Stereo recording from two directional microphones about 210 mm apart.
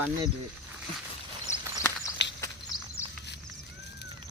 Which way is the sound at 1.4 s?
15° left (ahead or behind).